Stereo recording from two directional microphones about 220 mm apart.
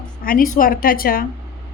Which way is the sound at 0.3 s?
40° left (ahead or behind).